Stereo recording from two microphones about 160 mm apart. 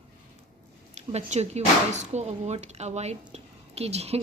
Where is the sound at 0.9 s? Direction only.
45° right (ahead or behind).